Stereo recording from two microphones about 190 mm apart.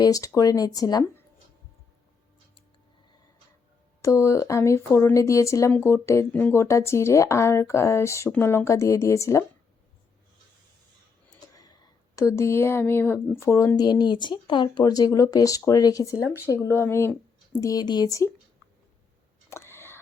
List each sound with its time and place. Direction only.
0.0 s speech: 20° left (ahead or behind)
4.0 s speech: 15° left (ahead or behind)
11.3 s speech: 20° left (ahead or behind)
19.5 s a sound: 15° left (ahead or behind)